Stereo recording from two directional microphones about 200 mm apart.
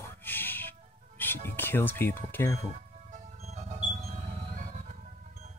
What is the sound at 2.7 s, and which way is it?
Music, 35° right (ahead or behind).